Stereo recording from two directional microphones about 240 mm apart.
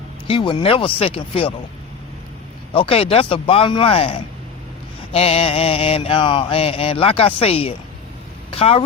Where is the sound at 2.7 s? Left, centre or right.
Left.